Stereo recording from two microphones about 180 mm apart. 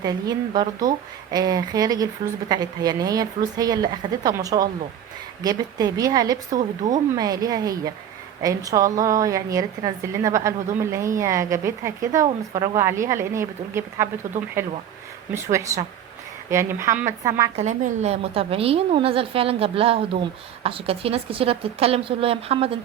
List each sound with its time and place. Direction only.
0.0 s a woman's voice: 25° right (ahead or behind)
17.6 s a woman's voice: 40° right (ahead or behind)